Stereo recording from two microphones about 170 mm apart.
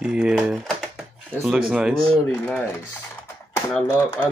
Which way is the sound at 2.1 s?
5° left (ahead or behind).